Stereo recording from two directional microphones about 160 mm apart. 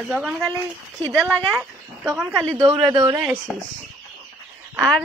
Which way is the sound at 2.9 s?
25° right (ahead or behind).